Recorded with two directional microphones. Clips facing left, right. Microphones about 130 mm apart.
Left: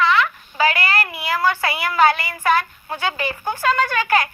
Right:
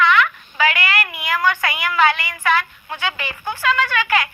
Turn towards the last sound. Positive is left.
turn(degrees=40)  # may be behind; listen again after turning